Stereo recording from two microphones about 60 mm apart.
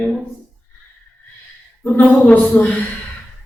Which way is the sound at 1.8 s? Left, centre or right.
Left.